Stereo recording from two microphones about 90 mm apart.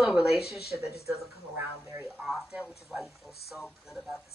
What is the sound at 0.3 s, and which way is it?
Speech, 90° left.